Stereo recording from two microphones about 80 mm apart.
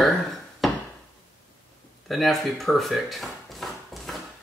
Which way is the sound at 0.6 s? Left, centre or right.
Centre.